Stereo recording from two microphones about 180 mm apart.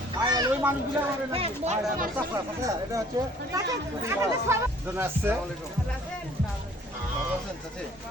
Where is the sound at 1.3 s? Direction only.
35° right (ahead or behind).